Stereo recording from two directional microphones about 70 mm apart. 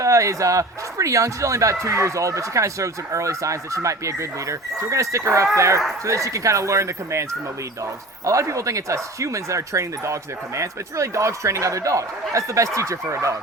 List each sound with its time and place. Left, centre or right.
0.0 s speech: right